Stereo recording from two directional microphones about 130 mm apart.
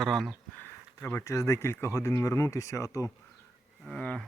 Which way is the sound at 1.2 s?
25° left (ahead or behind).